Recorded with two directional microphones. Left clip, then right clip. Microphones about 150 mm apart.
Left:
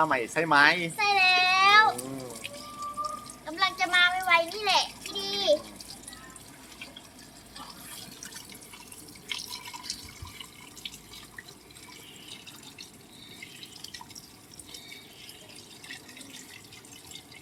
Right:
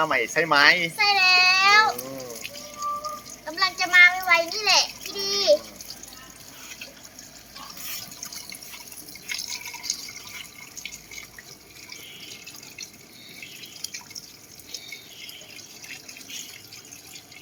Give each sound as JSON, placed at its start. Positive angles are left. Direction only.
{"t": 0.0, "sound": "speech", "side_deg": -10}
{"t": 0.9, "sound": "a child's voice", "side_deg": 0}
{"t": 2.0, "sound": "a sound", "side_deg": -25}
{"t": 3.0, "sound": "a sound", "side_deg": -5}
{"t": 4.5, "sound": "a child's voice", "side_deg": -5}
{"t": 5.1, "sound": "water", "side_deg": -10}
{"t": 9.3, "sound": "drip", "side_deg": -20}